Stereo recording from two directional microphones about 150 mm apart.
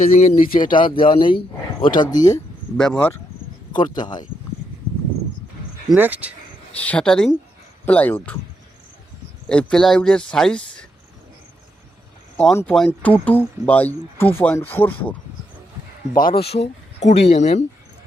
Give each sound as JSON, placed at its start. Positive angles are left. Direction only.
{"t": 0.1, "sound": "speech", "side_deg": 50}
{"t": 0.6, "sound": "speech", "side_deg": 30}
{"t": 2.7, "sound": "speech", "side_deg": 5}
{"t": 3.7, "sound": "speech", "side_deg": 30}
{"t": 5.9, "sound": "speech", "side_deg": -10}
{"t": 6.7, "sound": "speech", "side_deg": 10}
{"t": 9.5, "sound": "speech", "side_deg": 5}
{"t": 12.5, "sound": "speech", "side_deg": 5}
{"t": 16.1, "sound": "speech", "side_deg": 70}
{"t": 16.4, "sound": "speech", "side_deg": 40}